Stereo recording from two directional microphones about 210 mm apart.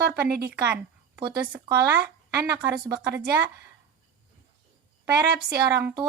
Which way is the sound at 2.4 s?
5° right (ahead or behind).